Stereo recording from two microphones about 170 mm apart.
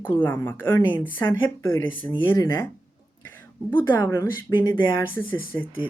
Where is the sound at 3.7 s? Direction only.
15° left (ahead or behind).